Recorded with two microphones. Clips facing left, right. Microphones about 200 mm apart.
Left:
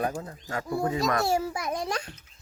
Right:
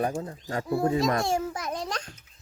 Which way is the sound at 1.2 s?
5° left (ahead or behind).